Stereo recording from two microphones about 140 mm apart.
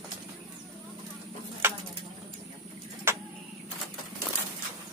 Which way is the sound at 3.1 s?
15° right (ahead or behind).